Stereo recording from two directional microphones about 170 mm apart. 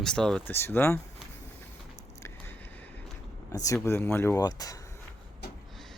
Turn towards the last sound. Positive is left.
turn(degrees=20)  # may be behind; listen again after turning